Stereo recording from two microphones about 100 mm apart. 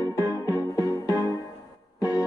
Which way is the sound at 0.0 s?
35° left (ahead or behind).